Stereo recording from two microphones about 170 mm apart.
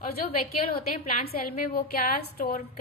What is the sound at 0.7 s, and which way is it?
A woman's voice, 55° left (ahead or behind).